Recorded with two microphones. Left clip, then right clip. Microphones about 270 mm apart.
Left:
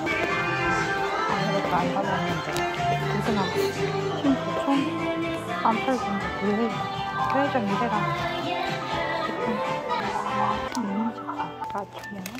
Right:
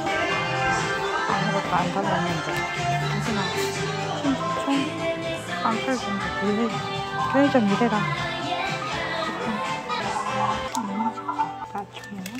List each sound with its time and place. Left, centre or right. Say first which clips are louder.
7.3 s speech: right 6 dB; right